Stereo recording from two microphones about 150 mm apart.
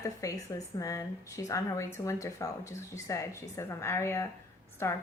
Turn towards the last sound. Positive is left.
turn(degrees=20)  # may be behind; listen again after turning